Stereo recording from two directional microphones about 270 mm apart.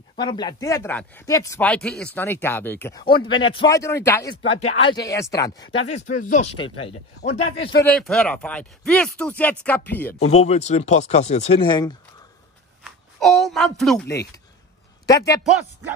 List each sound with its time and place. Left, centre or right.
0.2 s speech: centre
4.5 s speech: left
5.9 s speech: left
7.8 s speech: centre
10.1 s speech: left
12.8 s speech: centre